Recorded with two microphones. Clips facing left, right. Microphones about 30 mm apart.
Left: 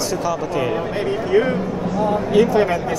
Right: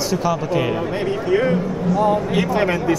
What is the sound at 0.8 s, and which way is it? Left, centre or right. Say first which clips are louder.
Speech: even; centre.